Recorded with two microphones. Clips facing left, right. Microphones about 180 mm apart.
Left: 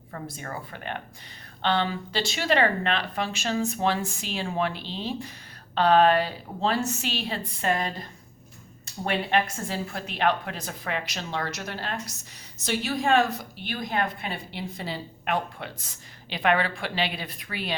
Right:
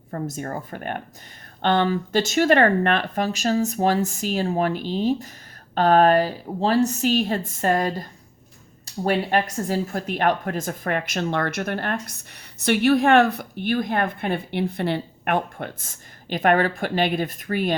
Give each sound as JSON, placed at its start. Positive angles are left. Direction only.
{"t": 0.1, "sound": "a woman's voice", "side_deg": -45}
{"t": 9.0, "sound": "a woman's voice", "side_deg": -40}